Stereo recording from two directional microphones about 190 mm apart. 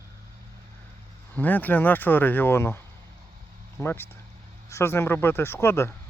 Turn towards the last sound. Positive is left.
turn(degrees=15)  # may be behind; listen again after turning